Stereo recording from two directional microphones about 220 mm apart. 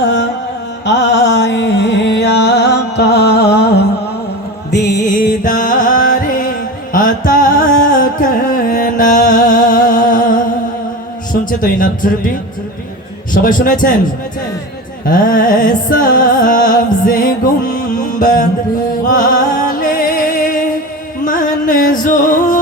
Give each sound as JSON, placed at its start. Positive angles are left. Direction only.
{"t": 0.0, "sound": "carnatic music", "side_deg": 55}
{"t": 0.9, "sound": "music", "side_deg": 55}
{"t": 5.0, "sound": "music", "side_deg": 35}
{"t": 11.4, "sound": "speech", "side_deg": 40}
{"t": 13.3, "sound": "speech", "side_deg": 40}
{"t": 15.0, "sound": "music", "side_deg": 35}